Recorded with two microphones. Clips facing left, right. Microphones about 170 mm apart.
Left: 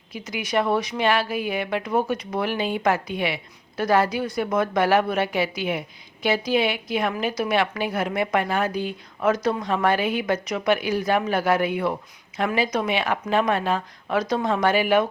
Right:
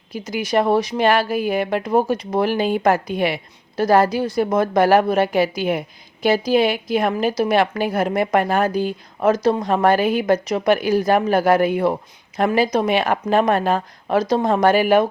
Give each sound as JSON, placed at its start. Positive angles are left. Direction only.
{"t": 0.1, "sound": "a woman's voice", "side_deg": -40}